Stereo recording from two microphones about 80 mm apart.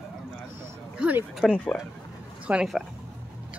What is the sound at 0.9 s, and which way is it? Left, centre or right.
Speech, centre.